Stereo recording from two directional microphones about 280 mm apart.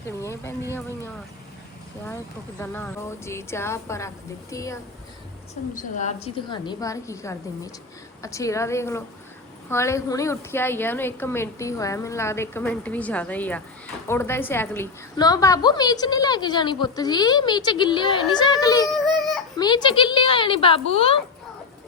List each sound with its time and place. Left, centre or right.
0.2 s a woman's voice: centre
5.7 s a woman's voice: left